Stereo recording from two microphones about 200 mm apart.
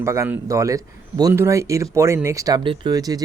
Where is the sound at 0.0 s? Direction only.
15° right (ahead or behind).